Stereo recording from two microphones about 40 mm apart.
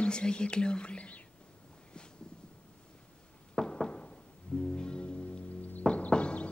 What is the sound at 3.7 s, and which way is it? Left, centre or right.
Music, left.